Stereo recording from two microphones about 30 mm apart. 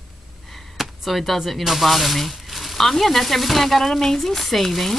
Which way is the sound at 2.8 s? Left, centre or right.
Centre.